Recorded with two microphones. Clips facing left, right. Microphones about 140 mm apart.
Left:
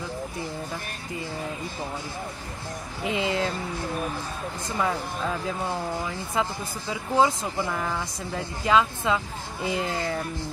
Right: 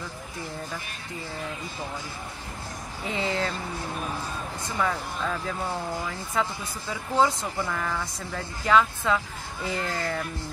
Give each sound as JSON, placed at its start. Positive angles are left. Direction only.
{"t": 3.0, "sound": "speech", "side_deg": 5}
{"t": 4.7, "sound": "speech", "side_deg": 15}
{"t": 6.9, "sound": "speech", "side_deg": 10}